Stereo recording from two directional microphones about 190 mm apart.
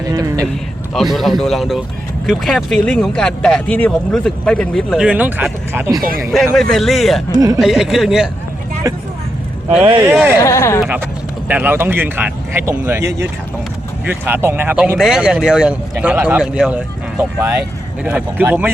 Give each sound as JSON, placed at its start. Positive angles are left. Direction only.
{"t": 0.0, "sound": "a sound", "side_deg": -20}
{"t": 0.9, "sound": "speech", "side_deg": 0}
{"t": 6.3, "sound": "speech", "side_deg": 0}
{"t": 7.3, "sound": "speech", "side_deg": -20}
{"t": 7.6, "sound": "speech", "side_deg": 0}
{"t": 8.9, "sound": "speech", "side_deg": -15}
{"t": 10.4, "sound": "speech", "side_deg": 15}
{"t": 10.8, "sound": "speech", "side_deg": -10}
{"t": 14.1, "sound": "speech", "side_deg": -10}